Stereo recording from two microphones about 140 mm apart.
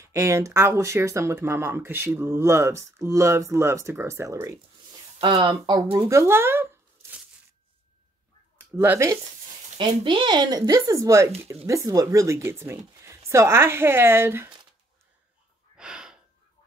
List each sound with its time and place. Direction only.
0.0 s speech: 20° right (ahead or behind)
5.2 s speech: 35° right (ahead or behind); by 7.2 s 15° right (ahead or behind)
8.8 s speech: 20° right (ahead or behind)
9.8 s speech: 35° right (ahead or behind); by 14.5 s 15° right (ahead or behind)
15.8 s gasp: 5° right (ahead or behind)